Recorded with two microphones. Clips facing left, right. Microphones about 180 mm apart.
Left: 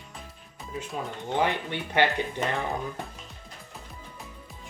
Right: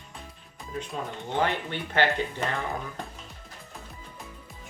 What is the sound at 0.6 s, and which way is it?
Speech, 5° left (ahead or behind).